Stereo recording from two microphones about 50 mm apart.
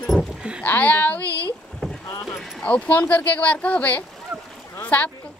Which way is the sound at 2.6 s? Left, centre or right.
Left.